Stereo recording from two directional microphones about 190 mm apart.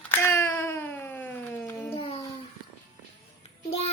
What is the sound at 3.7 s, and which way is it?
Child singing, 30° left (ahead or behind).